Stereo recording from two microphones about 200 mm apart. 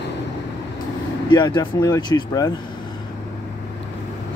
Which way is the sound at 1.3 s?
20° left (ahead or behind).